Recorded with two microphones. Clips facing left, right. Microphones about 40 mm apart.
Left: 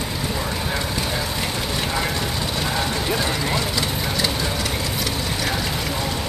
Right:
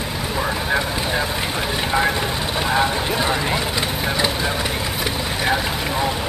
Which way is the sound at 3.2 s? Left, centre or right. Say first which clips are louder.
Right 2 dB; centre.